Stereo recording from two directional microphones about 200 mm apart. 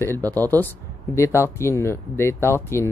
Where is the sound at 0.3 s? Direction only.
10° left (ahead or behind).